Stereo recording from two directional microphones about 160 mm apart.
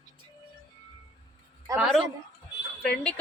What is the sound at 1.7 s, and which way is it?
A woman's voice, centre (ahead or behind).